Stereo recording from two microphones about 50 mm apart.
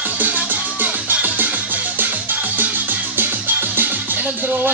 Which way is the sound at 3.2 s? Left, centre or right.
Right.